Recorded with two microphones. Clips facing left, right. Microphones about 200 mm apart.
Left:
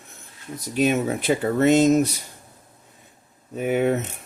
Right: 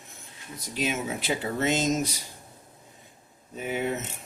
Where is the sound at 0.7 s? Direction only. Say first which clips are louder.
Left 9 dB; 55° left (ahead or behind).